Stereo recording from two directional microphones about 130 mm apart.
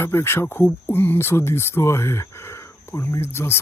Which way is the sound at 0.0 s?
20° left (ahead or behind).